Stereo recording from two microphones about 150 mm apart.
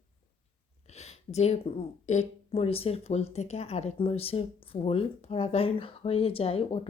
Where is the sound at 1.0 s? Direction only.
45° left (ahead or behind).